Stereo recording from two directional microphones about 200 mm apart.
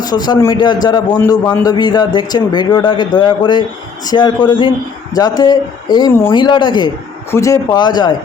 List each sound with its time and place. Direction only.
0.0 s a man's voice: 20° left (ahead or behind)